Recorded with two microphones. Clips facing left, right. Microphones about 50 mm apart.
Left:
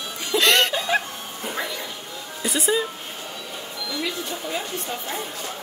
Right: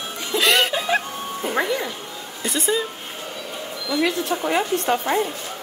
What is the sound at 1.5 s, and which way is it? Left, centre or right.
Music, right.